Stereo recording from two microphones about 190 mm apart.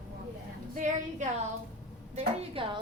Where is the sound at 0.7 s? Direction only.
40° right (ahead or behind).